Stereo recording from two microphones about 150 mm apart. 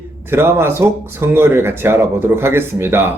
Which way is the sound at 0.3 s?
15° right (ahead or behind).